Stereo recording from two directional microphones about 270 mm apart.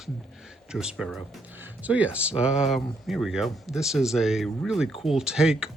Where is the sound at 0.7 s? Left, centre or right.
Centre.